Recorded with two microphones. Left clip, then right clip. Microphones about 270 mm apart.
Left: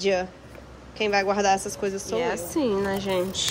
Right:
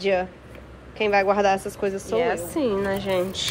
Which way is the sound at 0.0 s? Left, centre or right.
Centre.